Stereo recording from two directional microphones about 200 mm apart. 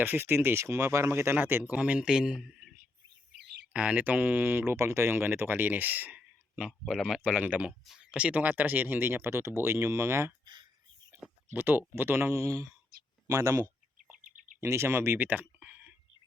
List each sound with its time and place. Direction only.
0.0 s speech: 10° right (ahead or behind)
3.4 s a sound: 55° right (ahead or behind)
3.7 s speech: 5° right (ahead or behind); by 10.7 s 20° right (ahead or behind)
11.5 s speech: 10° right (ahead or behind)
12.9 s a sound: 50° right (ahead or behind)
13.2 s speech: 15° right (ahead or behind)
14.3 s bird: 40° right (ahead or behind)
14.6 s speech: 15° right (ahead or behind)